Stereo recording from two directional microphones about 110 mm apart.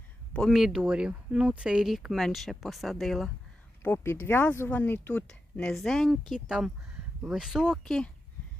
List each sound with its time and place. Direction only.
0.3 s speech: centre (ahead or behind)
3.8 s speech: 20° left (ahead or behind); by 7.8 s 5° right (ahead or behind)
7.9 s speech: 5° left (ahead or behind)